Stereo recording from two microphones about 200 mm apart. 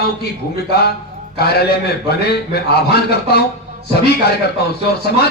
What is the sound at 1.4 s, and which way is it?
A man's voice, 50° left (ahead or behind).